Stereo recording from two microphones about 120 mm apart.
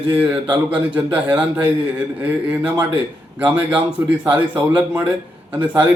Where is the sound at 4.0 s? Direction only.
20° right (ahead or behind).